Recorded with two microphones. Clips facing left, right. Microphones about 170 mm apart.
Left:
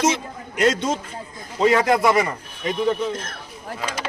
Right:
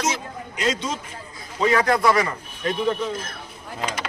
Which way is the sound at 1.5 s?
25° left (ahead or behind).